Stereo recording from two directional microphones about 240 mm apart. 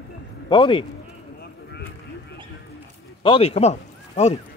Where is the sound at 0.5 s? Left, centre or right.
Centre.